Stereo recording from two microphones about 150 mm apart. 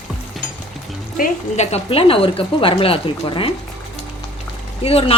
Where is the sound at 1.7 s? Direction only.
40° left (ahead or behind).